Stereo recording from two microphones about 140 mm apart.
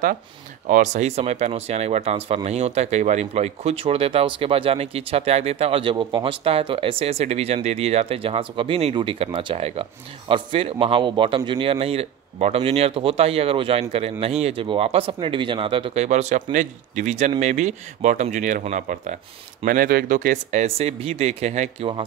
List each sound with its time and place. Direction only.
0.7 s speech: 60° right (ahead or behind)
19.6 s speech: 90° right; by 20.6 s 70° right (ahead or behind)
20.6 s speech: 45° right (ahead or behind)